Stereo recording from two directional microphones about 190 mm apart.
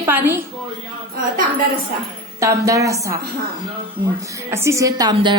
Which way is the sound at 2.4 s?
15° right (ahead or behind).